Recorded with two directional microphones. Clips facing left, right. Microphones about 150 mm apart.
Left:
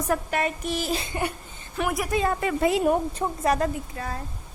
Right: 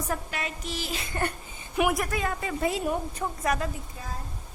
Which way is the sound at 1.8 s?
15° right (ahead or behind).